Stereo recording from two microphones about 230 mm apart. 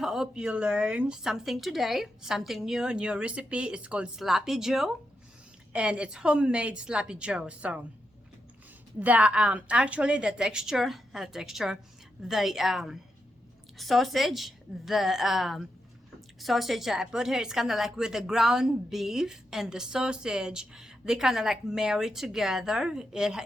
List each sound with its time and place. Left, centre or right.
0.0 s a woman's voice: centre
9.0 s a woman's voice: centre